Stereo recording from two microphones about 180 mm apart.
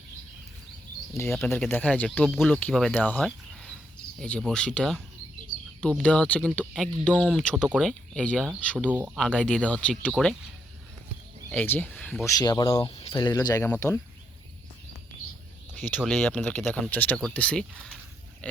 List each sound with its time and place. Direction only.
1.5 s speech: 10° left (ahead or behind)
7.1 s speech: 5° right (ahead or behind)
8.9 s speech: 10° right (ahead or behind)
9.1 s speech: 5° left (ahead or behind)
11.5 s speech: 10° left (ahead or behind)
12.2 s speech: 20° left (ahead or behind)
16.0 s speech: 5° left (ahead or behind)